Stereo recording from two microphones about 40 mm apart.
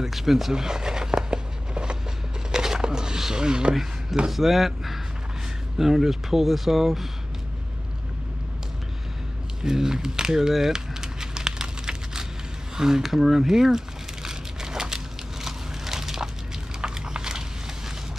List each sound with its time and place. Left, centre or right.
0.0 s a sound: centre
4.3 s speech: centre
9.6 s speech: centre
10.5 s crumpling: centre
15.4 s crushing: centre
16.8 s a sound: centre